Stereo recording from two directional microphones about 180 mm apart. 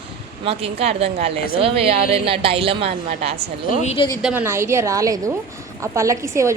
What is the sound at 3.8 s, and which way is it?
Speech, 35° left (ahead or behind).